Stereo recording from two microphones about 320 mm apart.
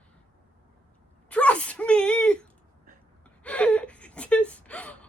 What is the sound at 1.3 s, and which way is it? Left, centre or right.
A woman's voice, centre.